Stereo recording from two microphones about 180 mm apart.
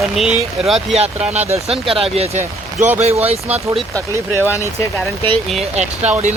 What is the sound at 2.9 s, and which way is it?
Speech, 35° right (ahead or behind).